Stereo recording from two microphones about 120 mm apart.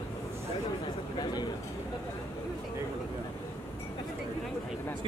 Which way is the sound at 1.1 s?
35° left (ahead or behind).